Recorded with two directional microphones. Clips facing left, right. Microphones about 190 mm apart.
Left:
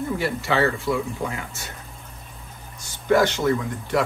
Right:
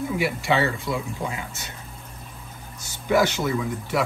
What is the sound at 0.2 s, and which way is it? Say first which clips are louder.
Speech: even; 15° right (ahead or behind).